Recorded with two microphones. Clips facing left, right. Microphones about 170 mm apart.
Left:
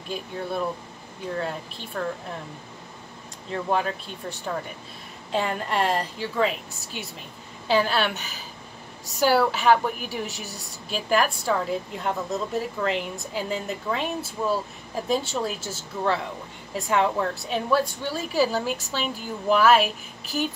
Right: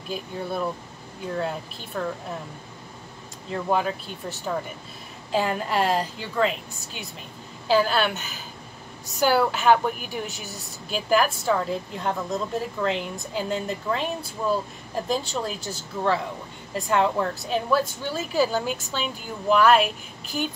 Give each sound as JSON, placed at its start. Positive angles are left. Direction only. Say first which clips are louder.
{"t": 0.1, "sound": "a woman's voice", "louder": "even", "side_deg": 0}
{"t": 2.0, "sound": "a woman's voice", "louder": "even", "side_deg": 0}
{"t": 3.4, "sound": "a woman's voice", "louder": "right 1 dB", "side_deg": 0}